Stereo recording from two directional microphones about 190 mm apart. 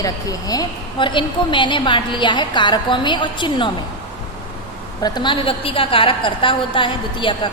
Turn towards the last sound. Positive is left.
turn(degrees=25)  # may be behind; listen again after turning